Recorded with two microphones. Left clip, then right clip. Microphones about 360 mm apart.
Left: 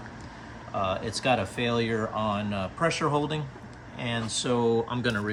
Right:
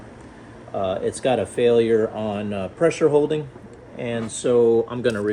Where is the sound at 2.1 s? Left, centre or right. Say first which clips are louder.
Right 2 dB; left.